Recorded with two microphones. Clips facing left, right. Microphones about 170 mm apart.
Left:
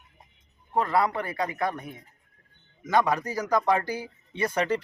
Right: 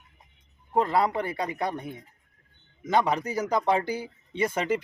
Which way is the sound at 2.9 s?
20° right (ahead or behind).